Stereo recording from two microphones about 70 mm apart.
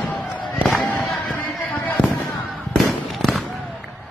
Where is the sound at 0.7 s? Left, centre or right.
Centre.